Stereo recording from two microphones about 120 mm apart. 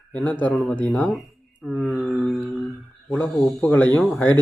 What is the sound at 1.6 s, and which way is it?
Mantra, 5° right (ahead or behind).